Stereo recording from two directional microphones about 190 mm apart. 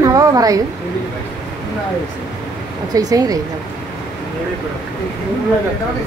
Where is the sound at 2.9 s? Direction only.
20° right (ahead or behind).